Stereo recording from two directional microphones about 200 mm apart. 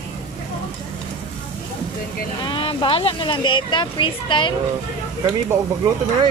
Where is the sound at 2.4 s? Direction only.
25° left (ahead or behind).